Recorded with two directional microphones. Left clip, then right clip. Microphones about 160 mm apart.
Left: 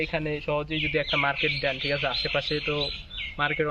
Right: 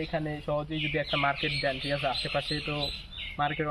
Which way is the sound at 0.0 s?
20° left (ahead or behind).